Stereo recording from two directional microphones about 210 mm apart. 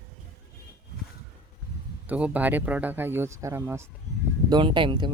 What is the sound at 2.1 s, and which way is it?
Speech, 5° right (ahead or behind).